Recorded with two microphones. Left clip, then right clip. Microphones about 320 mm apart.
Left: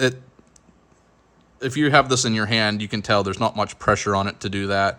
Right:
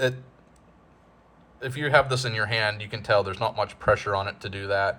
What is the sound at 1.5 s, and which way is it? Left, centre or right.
A man's voice, left.